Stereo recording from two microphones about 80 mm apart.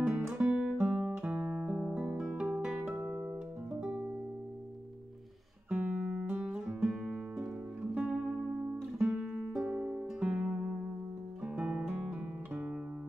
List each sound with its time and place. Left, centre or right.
0.0 s guitar: centre
1.1 s music: centre
2.1 s guitar: centre
2.6 s music: centre
5.7 s music: centre
11.4 s guitar: centre